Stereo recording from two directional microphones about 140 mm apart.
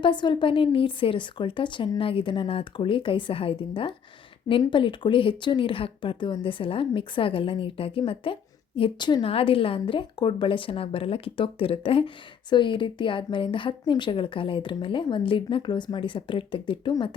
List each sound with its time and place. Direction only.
0.0 s a woman's voice: 35° left (ahead or behind)